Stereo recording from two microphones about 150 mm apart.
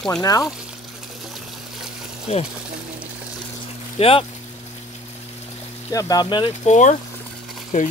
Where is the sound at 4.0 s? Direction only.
40° left (ahead or behind).